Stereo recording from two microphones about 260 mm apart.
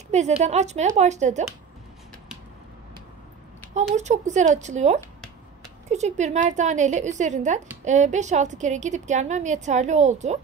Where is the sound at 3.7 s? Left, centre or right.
Right.